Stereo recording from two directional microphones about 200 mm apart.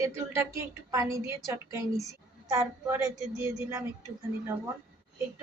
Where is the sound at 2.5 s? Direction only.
15° right (ahead or behind).